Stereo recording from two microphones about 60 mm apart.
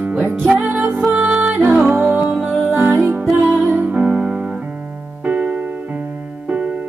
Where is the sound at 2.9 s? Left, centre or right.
Right.